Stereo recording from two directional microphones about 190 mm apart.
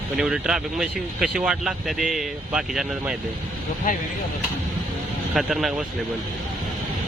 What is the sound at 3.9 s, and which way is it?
Speech, 45° left (ahead or behind).